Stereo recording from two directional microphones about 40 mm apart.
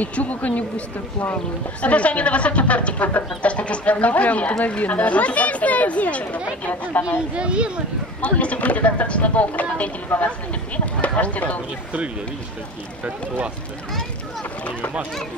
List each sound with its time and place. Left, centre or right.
0.0 s speech: left
7.3 s speech: right
8.2 s speech: left